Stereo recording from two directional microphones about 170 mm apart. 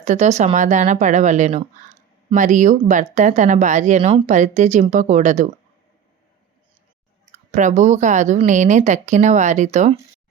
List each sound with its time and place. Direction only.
0.0 s speech: 40° right (ahead or behind)
7.5 s speech: 45° right (ahead or behind)